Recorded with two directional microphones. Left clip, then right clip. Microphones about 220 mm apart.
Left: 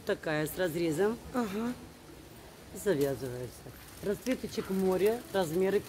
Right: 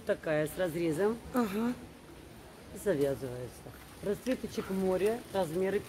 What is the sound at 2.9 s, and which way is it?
Speech, 35° left (ahead or behind).